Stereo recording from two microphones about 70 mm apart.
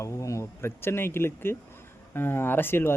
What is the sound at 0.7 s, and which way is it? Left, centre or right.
Speech, left.